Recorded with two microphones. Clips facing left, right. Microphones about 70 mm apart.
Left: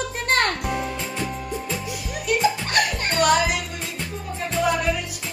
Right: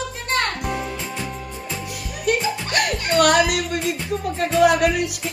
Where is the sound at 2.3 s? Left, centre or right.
Right.